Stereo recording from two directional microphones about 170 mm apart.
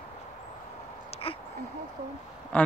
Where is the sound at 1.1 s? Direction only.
35° left (ahead or behind).